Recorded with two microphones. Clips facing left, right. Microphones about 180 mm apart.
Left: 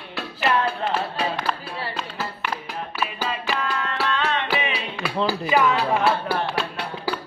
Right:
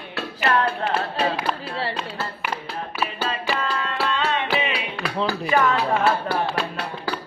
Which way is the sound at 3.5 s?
Centre (ahead or behind).